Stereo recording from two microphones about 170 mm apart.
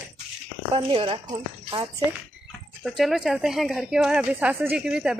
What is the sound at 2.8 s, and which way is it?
Speech, centre (ahead or behind).